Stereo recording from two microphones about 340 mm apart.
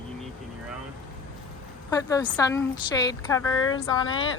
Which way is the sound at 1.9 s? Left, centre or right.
Centre.